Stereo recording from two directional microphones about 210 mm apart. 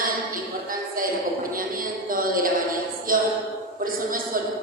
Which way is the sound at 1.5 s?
40° right (ahead or behind).